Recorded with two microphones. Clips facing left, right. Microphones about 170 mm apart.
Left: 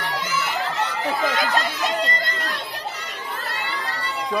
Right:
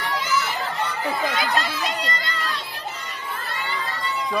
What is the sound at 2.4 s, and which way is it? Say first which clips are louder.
Crowd: left 1 dB; 70° left (ahead or behind).